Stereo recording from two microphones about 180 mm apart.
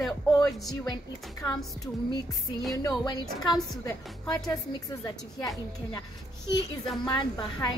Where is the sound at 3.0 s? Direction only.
20° left (ahead or behind).